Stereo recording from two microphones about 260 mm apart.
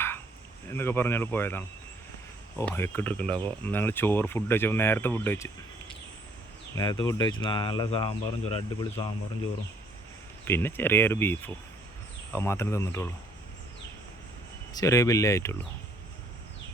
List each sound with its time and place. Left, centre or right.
0.7 s speech: centre
6.7 s speech: centre
10.4 s speech: centre
14.7 s speech: centre